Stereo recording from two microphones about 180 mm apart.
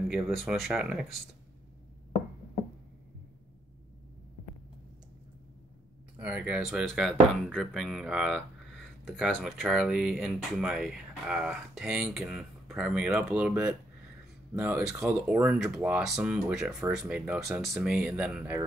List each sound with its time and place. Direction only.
0.1 s speech: centre (ahead or behind)
6.1 s speech: 5° right (ahead or behind)
14.9 s speech: 5° right (ahead or behind)